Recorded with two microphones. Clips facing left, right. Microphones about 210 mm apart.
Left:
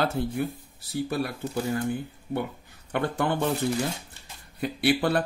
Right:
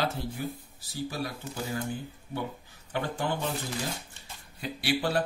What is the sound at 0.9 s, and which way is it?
Speech, 60° left (ahead or behind).